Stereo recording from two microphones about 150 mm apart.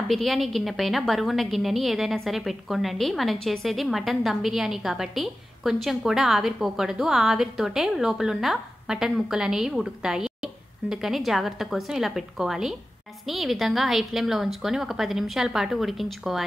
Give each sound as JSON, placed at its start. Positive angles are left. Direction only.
{"t": 0.1, "sound": "a woman's voice", "side_deg": 0}